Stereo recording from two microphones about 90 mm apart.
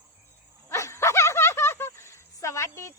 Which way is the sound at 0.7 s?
35° left (ahead or behind).